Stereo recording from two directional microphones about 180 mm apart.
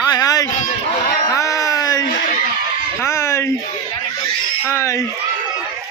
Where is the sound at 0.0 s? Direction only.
20° left (ahead or behind).